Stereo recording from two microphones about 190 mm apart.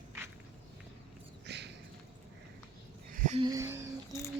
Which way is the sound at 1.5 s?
65° right (ahead or behind).